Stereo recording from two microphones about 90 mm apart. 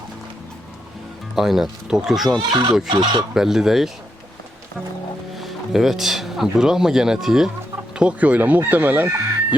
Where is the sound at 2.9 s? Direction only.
60° right (ahead or behind).